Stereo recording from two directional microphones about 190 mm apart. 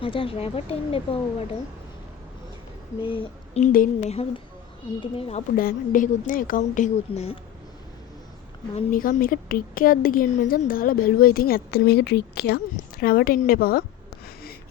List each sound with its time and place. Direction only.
0.0 s speech: 30° left (ahead or behind)
3.0 s a sound: 30° left (ahead or behind)
3.6 s a woman's voice: 45° left (ahead or behind)
4.9 s speech: 30° left (ahead or behind)
5.5 s a woman's voice: 45° left (ahead or behind)
8.9 s a woman's voice: 45° left (ahead or behind)